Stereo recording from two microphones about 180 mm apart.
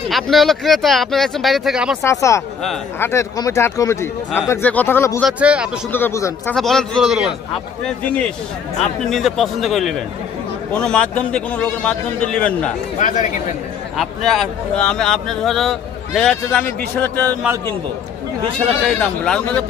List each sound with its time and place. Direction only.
0.1 s speech: centre (ahead or behind)
2.0 s a man's voice: 15° left (ahead or behind)
5.2 s speech: 5° right (ahead or behind)
5.9 s a man's voice: 10° left (ahead or behind)
6.5 s a man's voice: centre (ahead or behind)
13.0 s speech: 45° left (ahead or behind)
13.9 s speech: centre (ahead or behind)
18.9 s speech: 5° left (ahead or behind)